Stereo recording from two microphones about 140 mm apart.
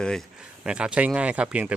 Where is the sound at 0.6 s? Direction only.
5° right (ahead or behind).